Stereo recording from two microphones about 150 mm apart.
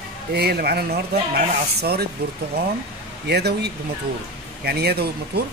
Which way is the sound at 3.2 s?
90° right.